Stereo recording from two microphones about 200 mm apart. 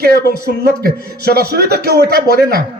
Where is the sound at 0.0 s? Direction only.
50° right (ahead or behind).